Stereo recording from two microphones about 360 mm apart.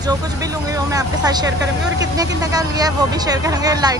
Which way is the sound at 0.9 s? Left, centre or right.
Centre.